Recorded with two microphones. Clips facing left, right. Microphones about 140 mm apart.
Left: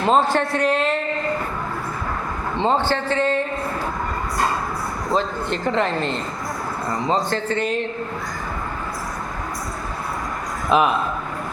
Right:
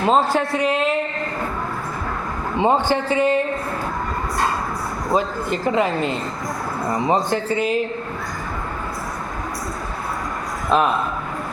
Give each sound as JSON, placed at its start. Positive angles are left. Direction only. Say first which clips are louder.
{"t": 0.0, "sound": "a man's voice", "louder": "even", "side_deg": 0}
{"t": 2.6, "sound": "speech", "louder": "right 2 dB", "side_deg": -15}
{"t": 5.1, "sound": "speech", "louder": "right 2 dB", "side_deg": -5}
{"t": 10.7, "sound": "a man's voice", "louder": "even", "side_deg": 5}